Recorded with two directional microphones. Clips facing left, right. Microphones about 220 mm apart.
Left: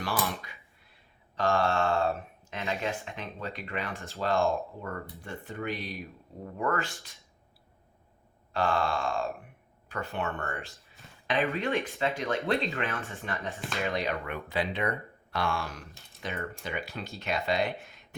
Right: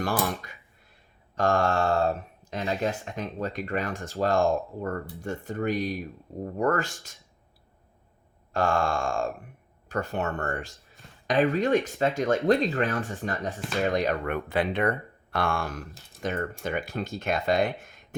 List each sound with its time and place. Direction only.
0.0 s a sound: 45° right (ahead or behind)
1.4 s speech: 45° right (ahead or behind)
5.2 s speech: 45° right (ahead or behind)
8.5 s speech: 45° right (ahead or behind)
10.7 s speech: centre (ahead or behind)
11.3 s speech: 45° right (ahead or behind)
14.3 s speech: 55° right (ahead or behind)